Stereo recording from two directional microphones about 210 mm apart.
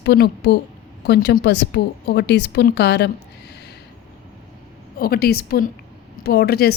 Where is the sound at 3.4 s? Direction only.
50° left (ahead or behind).